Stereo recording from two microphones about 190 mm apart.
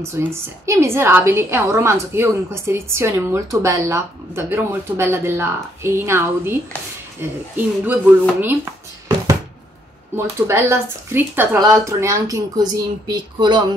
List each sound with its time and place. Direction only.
0.0 s a woman's voice: 15° right (ahead or behind)
10.1 s a woman's voice: 10° right (ahead or behind)